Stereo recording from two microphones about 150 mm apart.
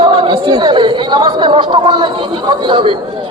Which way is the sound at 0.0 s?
30° right (ahead or behind).